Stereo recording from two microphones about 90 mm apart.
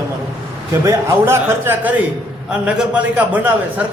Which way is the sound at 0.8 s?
30° right (ahead or behind).